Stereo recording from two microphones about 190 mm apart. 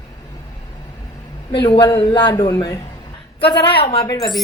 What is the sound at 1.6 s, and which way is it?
Speech, 25° left (ahead or behind).